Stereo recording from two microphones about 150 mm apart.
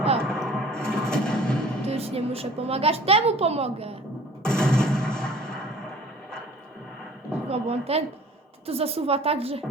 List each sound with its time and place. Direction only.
0.2 s music: 5° left (ahead or behind)
1.9 s a woman's voice: 40° right (ahead or behind)
4.4 s music: 5° left (ahead or behind)
7.4 s a woman's voice: 45° right (ahead or behind)